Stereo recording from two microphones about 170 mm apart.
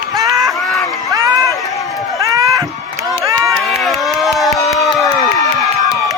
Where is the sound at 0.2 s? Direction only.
20° right (ahead or behind).